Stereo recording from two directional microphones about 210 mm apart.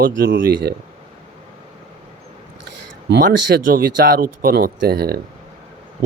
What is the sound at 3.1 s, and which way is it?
Speech, 50° right (ahead or behind).